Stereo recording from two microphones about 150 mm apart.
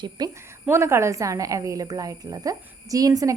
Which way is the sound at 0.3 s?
20° right (ahead or behind).